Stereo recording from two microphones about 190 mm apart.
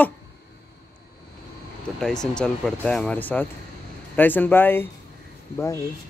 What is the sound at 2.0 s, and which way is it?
Speech, 5° left (ahead or behind).